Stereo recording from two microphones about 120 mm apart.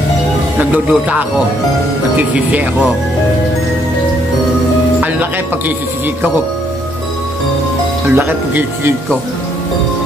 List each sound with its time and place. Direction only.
0.6 s speech: 15° right (ahead or behind)
8.1 s speech: 15° right (ahead or behind)